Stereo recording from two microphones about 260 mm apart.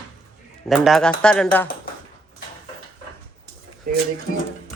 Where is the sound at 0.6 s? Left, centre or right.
Centre.